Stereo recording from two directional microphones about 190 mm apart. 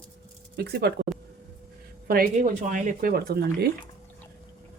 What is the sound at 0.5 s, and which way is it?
Speech, 60° right (ahead or behind).